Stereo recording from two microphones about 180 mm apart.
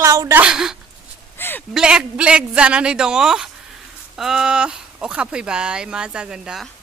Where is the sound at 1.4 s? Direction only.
10° left (ahead or behind).